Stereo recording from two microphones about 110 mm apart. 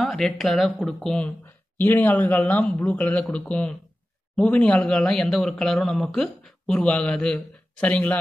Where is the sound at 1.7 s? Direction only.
15° left (ahead or behind).